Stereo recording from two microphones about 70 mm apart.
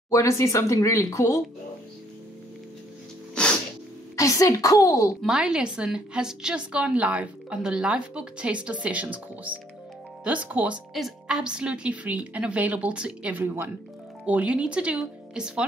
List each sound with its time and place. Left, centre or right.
0.1 s speech: left
4.2 s a woman's voice: left
5.2 s a woman's voice: centre
10.9 s a woman's voice: centre